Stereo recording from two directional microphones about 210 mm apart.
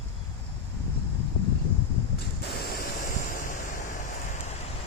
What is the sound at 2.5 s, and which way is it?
Waves, 50° left (ahead or behind).